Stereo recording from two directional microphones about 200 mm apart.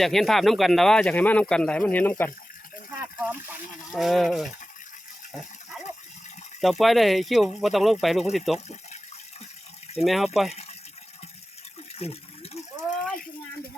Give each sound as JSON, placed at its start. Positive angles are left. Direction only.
{"t": 0.0, "sound": "speech", "side_deg": 0}
{"t": 3.9, "sound": "speech", "side_deg": 0}
{"t": 5.3, "sound": "a sound", "side_deg": 0}
{"t": 6.6, "sound": "speech", "side_deg": 0}
{"t": 8.5, "sound": "speech", "side_deg": 35}
{"t": 9.9, "sound": "speech", "side_deg": 0}
{"t": 10.5, "sound": "water", "side_deg": 30}
{"t": 11.9, "sound": "water", "side_deg": 30}